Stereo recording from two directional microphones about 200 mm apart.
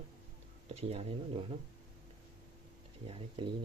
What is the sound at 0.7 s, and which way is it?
Speech, 30° right (ahead or behind).